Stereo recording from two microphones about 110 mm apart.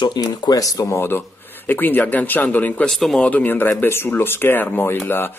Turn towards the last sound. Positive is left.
turn(degrees=20)  # may be behind; listen again after turning